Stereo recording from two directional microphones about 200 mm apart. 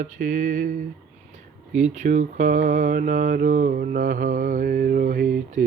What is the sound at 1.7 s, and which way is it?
Speech, 40° right (ahead or behind).